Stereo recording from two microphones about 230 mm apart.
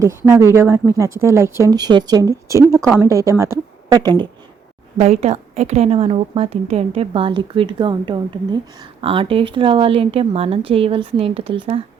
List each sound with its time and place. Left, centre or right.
0.0 s speech: centre
4.9 s a woman's voice: right